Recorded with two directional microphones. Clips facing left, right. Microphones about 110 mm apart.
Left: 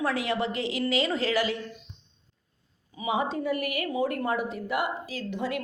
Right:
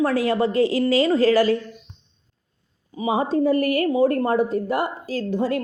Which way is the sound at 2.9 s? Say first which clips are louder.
Right 7 dB; 40° right (ahead or behind).